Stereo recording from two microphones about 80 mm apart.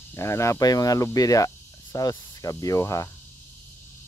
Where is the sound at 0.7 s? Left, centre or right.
Left.